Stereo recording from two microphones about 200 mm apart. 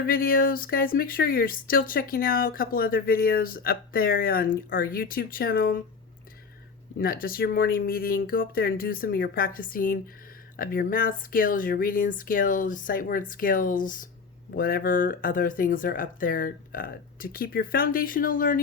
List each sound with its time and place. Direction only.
0.0 s speech: 45° left (ahead or behind)
7.0 s speech: 45° left (ahead or behind)